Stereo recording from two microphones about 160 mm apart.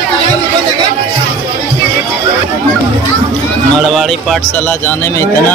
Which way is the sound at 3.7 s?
Centre (ahead or behind).